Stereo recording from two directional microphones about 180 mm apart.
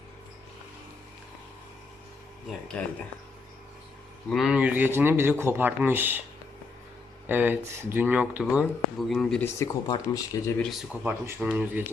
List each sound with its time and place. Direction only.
2.8 s speech: 5° left (ahead or behind)
4.3 s speech: centre (ahead or behind)
7.3 s speech: 10° right (ahead or behind)
9.4 s speech: 15° left (ahead or behind)
10.6 s speech: centre (ahead or behind)